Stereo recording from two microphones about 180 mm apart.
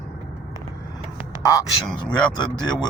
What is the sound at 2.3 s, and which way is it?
Speech, 20° left (ahead or behind).